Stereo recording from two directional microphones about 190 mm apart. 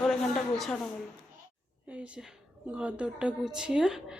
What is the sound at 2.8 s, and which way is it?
Speech, 5° right (ahead or behind).